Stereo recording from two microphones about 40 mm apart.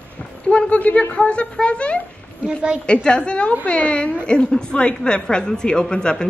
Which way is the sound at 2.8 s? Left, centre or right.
Left.